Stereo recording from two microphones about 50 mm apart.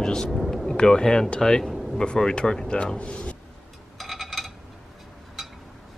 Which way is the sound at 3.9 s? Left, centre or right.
Centre.